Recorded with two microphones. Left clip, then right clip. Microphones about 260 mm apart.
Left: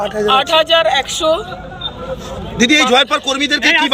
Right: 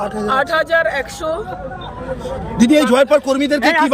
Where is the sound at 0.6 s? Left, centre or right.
Centre.